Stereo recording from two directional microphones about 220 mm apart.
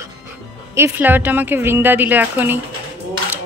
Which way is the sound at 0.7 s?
10° right (ahead or behind).